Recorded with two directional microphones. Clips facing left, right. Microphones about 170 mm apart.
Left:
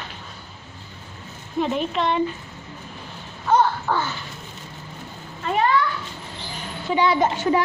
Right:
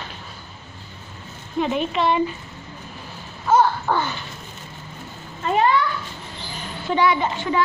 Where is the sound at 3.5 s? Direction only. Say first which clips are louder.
Right 1 dB; 10° right (ahead or behind).